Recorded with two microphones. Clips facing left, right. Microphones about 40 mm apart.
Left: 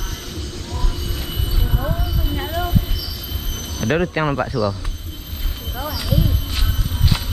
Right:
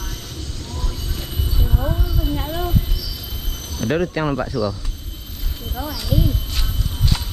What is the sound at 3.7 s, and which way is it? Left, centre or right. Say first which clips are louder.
Speech: left 1 dB; centre.